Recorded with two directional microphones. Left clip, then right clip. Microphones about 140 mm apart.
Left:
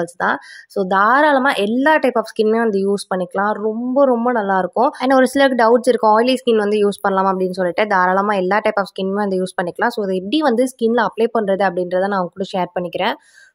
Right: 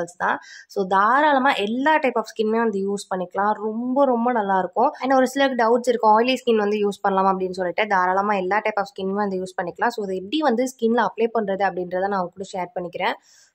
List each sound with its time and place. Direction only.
0.0 s a woman's voice: 40° left (ahead or behind)